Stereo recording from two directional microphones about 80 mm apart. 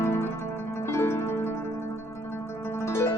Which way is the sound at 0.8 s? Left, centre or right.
Left.